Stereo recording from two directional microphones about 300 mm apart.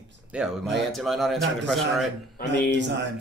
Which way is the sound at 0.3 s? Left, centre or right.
Centre.